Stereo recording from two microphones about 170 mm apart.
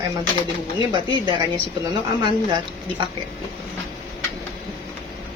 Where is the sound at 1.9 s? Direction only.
25° right (ahead or behind).